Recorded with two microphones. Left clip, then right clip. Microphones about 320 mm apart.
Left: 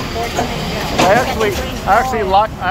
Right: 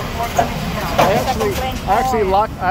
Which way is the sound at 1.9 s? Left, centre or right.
Centre.